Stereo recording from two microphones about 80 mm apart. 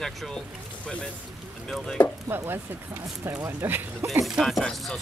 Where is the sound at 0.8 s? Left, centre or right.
Centre.